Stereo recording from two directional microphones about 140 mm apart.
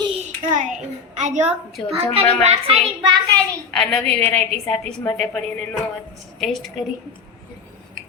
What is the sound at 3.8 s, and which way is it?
A woman's voice, 5° left (ahead or behind).